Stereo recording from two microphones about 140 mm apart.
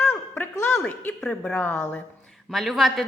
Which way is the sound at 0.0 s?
15° left (ahead or behind).